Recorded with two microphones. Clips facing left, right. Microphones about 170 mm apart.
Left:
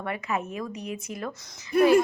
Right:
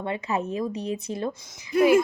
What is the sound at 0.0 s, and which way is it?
Speech, 30° right (ahead or behind).